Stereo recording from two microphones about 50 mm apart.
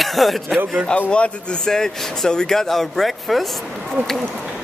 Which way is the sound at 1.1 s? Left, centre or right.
Left.